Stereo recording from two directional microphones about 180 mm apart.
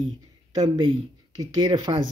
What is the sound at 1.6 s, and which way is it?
Speech, 25° right (ahead or behind).